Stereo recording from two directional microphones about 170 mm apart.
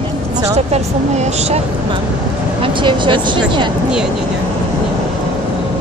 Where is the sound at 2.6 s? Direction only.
30° right (ahead or behind).